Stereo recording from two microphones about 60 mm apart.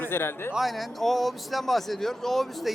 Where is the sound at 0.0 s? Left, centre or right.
Left.